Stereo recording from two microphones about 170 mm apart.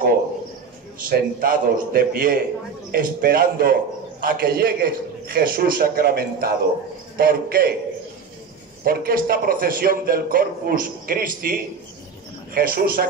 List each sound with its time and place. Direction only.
1.0 s a man's voice: 55° right (ahead or behind)
8.8 s a man's voice: 60° right (ahead or behind)